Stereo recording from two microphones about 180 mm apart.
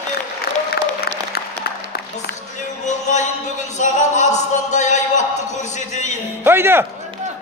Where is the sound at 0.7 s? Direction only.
60° left (ahead or behind).